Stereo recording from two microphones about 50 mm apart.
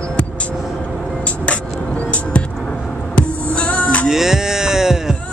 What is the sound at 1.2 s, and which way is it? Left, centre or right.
Music, left.